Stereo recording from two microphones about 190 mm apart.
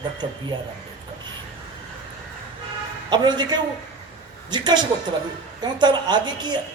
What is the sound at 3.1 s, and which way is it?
A man's voice, 25° right (ahead or behind).